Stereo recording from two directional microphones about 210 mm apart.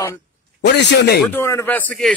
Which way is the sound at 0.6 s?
55° left (ahead or behind).